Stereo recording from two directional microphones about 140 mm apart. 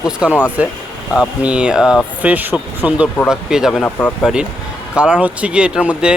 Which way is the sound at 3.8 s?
15° left (ahead or behind).